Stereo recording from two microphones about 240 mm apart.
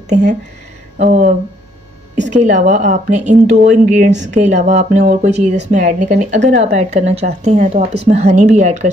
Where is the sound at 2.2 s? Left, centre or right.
Right.